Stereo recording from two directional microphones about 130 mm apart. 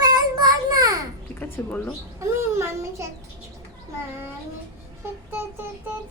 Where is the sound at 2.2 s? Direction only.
20° right (ahead or behind).